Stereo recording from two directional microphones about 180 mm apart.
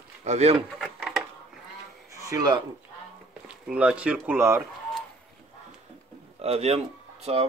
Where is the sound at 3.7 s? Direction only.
5° right (ahead or behind).